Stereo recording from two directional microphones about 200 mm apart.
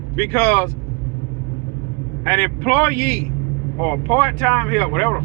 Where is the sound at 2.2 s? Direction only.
10° left (ahead or behind).